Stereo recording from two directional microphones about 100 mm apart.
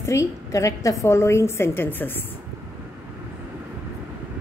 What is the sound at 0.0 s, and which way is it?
A woman's voice, 30° left (ahead or behind).